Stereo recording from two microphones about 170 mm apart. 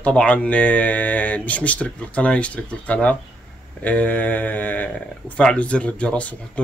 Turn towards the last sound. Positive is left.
turn(degrees=5)  # may be behind; listen again after turning